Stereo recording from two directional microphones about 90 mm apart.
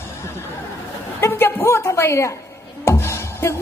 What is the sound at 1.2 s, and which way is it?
A woman's voice, 25° left (ahead or behind).